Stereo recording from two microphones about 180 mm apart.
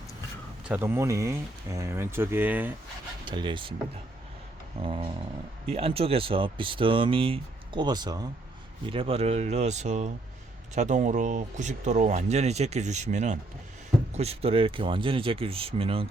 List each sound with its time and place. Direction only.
0.6 s speech: 10° right (ahead or behind)
3.2 s speech: 25° right (ahead or behind)
4.8 s speech: 30° right (ahead or behind)